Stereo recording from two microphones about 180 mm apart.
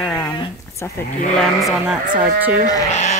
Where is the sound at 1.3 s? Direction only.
Centre (ahead or behind).